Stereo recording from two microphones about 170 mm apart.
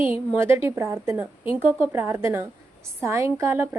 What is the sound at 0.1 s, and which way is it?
A woman's voice, 10° right (ahead or behind).